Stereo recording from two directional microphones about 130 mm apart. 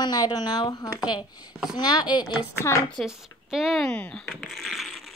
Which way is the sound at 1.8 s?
35° left (ahead or behind).